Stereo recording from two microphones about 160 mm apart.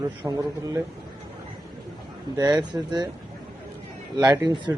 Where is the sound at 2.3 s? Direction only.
25° right (ahead or behind).